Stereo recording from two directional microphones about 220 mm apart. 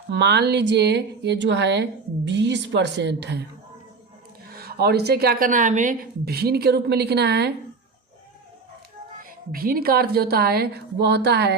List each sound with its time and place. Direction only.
0.1 s a woman's voice: 50° right (ahead or behind)
4.5 s a woman's voice: 45° right (ahead or behind)
9.5 s a woman's voice: 40° right (ahead or behind)